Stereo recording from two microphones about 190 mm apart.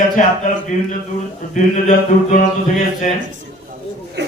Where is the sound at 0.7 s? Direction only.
40° left (ahead or behind).